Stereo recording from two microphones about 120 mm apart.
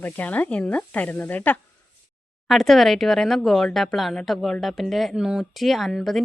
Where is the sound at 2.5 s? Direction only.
Centre (ahead or behind).